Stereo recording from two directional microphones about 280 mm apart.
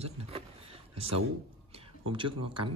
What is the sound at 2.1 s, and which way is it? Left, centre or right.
Speech, centre.